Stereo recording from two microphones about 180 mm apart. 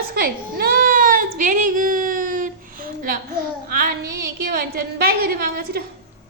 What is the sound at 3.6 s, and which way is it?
Child singing, 50° right (ahead or behind).